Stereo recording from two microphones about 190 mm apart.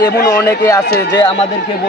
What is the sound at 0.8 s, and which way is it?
Speech, 55° left (ahead or behind).